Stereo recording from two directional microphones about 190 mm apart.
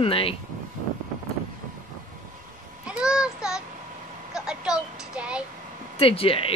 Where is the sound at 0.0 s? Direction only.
30° left (ahead or behind).